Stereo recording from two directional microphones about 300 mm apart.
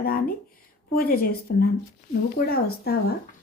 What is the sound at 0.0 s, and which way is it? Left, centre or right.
Speech, left.